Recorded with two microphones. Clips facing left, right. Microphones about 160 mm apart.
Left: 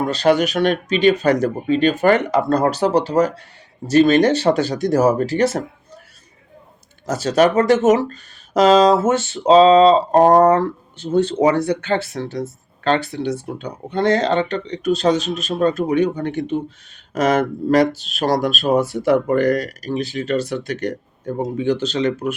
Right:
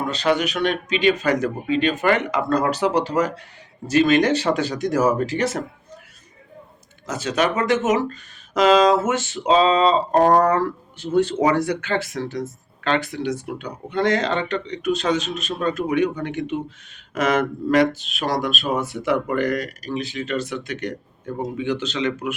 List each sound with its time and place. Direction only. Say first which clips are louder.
0.1 s speech: left 5 dB; 40° left (ahead or behind)
7.1 s speech: left 6 dB; 40° left (ahead or behind)